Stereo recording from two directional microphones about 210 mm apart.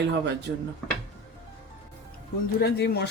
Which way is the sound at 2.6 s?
50° left (ahead or behind).